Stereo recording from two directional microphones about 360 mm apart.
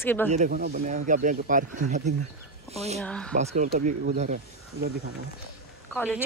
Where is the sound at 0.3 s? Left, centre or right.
Right.